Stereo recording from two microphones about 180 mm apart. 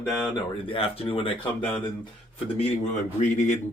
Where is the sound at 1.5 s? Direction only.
10° left (ahead or behind).